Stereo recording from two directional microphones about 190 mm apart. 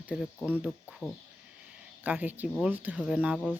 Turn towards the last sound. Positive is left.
turn(degrees=-5)  # may be behind; listen again after turning